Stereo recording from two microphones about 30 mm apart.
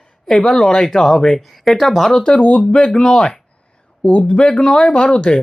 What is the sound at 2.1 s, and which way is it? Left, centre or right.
Speech, left.